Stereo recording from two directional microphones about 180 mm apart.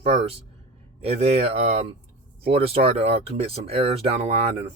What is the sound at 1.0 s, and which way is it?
Speech, 35° right (ahead or behind).